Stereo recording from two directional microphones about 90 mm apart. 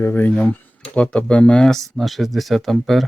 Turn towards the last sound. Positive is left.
turn(degrees=0)  # may be behind; listen again after turning